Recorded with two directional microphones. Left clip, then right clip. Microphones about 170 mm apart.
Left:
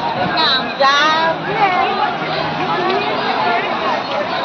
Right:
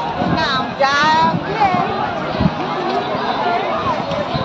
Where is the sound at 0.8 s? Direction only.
35° left (ahead or behind).